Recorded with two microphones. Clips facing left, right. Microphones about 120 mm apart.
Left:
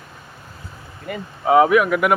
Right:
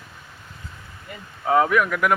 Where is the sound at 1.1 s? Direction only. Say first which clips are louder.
Left 11 dB; 70° left (ahead or behind).